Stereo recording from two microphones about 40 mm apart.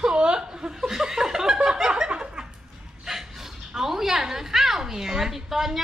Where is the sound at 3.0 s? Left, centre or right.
Centre.